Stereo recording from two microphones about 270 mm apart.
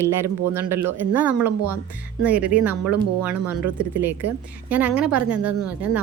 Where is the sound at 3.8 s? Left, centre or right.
Centre.